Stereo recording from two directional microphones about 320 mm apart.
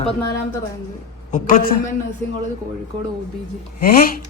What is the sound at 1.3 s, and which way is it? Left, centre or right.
Speech, left.